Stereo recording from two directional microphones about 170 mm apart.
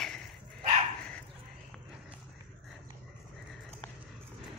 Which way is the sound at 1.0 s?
5° left (ahead or behind).